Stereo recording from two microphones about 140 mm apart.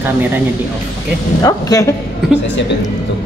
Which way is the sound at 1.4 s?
25° left (ahead or behind).